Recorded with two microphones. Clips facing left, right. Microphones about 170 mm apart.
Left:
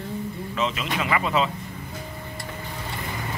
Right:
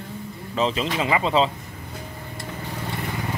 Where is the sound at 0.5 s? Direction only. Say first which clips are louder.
Right 4 dB; 30° right (ahead or behind).